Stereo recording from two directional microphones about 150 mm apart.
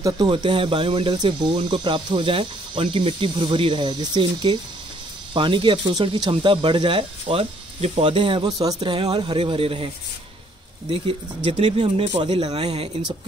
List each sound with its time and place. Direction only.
0.0 s speech: 30° right (ahead or behind)
10.9 s speech: 40° right (ahead or behind)